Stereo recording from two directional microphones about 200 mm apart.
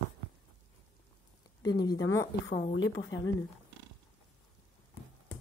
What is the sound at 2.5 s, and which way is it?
Speech, 60° left (ahead or behind).